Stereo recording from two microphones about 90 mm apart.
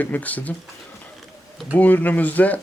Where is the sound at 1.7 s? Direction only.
20° left (ahead or behind).